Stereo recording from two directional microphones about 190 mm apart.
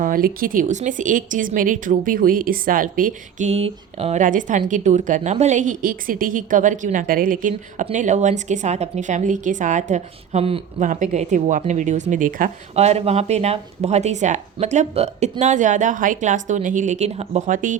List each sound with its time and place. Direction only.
0.0 s a woman's voice: 50° right (ahead or behind)